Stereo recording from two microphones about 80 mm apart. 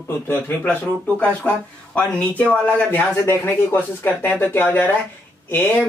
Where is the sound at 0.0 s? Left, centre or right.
Left.